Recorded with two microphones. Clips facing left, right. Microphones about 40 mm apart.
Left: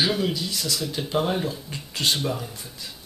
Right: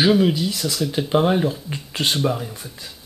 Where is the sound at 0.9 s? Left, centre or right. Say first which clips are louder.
Right 7 dB; right.